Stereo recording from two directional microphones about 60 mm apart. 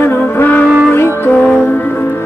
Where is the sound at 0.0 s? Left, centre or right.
Left.